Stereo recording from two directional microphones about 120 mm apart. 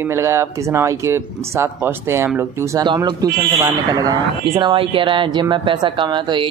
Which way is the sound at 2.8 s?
40° right (ahead or behind).